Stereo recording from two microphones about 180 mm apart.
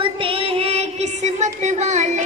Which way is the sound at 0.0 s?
30° right (ahead or behind).